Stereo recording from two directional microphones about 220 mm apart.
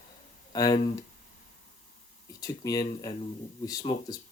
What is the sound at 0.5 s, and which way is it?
Speech, 15° left (ahead or behind).